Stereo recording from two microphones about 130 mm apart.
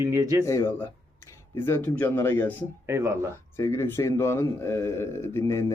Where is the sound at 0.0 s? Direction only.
20° right (ahead or behind).